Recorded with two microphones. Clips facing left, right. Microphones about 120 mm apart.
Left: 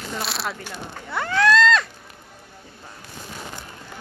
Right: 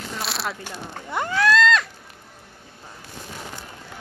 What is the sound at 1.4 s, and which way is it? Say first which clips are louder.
Cat: left 1 dB; 5° right (ahead or behind).